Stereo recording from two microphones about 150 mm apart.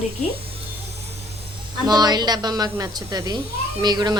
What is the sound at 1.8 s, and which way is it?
A woman's voice, 25° right (ahead or behind).